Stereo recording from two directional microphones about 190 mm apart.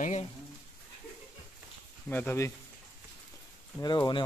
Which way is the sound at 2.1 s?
10° left (ahead or behind).